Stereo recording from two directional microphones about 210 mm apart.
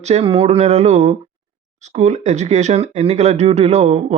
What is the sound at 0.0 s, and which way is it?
Speech, 30° right (ahead or behind).